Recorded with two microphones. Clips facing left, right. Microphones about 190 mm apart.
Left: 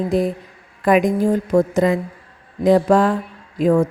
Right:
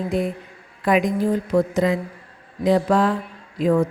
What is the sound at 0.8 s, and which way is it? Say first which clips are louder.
A woman's voice: left 4 dB; 50° left (ahead or behind).